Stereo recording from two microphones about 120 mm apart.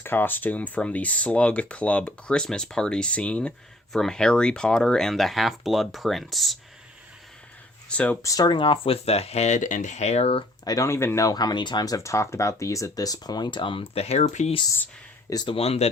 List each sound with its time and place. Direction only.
0.0 s speech: 20° left (ahead or behind); by 6.6 s centre (ahead or behind)
7.9 s speech: 10° left (ahead or behind)
8.2 s speech: 30° left (ahead or behind)
8.5 s speech: 45° left (ahead or behind)
10.6 s speech: 30° left (ahead or behind); by 14.5 s 70° left (ahead or behind)
15.3 s speech: 35° left (ahead or behind)
15.5 s speech: 55° left (ahead or behind)